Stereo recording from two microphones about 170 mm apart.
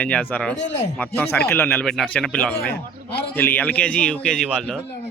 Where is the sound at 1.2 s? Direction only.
10° left (ahead or behind).